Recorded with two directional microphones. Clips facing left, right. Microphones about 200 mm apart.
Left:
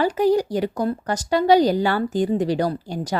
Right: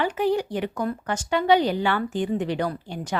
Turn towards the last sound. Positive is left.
turn(degrees=40)  # may be behind; listen again after turning